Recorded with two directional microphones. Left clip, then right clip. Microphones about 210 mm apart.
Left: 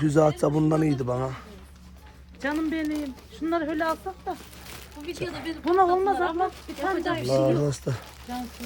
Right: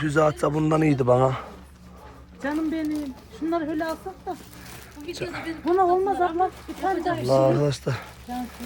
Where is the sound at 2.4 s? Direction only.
Centre (ahead or behind).